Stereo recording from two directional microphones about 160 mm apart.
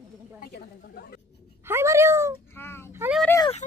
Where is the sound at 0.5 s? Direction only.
75° left (ahead or behind).